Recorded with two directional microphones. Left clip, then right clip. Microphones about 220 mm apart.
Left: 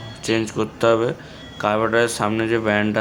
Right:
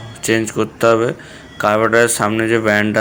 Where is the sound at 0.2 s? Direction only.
15° right (ahead or behind).